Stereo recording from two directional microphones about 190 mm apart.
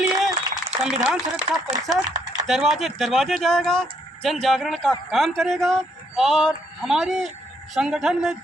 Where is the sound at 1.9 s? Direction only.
20° right (ahead or behind).